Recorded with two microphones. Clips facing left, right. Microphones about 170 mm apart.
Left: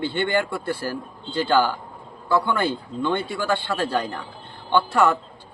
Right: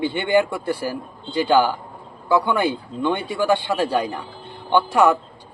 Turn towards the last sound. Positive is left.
turn(degrees=-15)  # may be behind; listen again after turning